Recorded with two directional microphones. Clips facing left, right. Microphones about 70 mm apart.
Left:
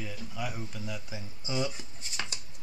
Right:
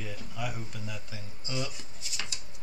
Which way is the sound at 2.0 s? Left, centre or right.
Left.